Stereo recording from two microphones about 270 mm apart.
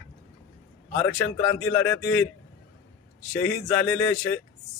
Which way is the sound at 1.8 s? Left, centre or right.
Left.